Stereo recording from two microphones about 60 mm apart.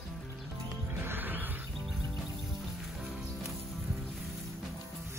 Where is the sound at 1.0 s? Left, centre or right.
Right.